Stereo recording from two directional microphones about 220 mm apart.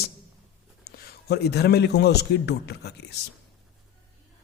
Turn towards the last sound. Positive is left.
turn(degrees=50)  # may be behind; listen again after turning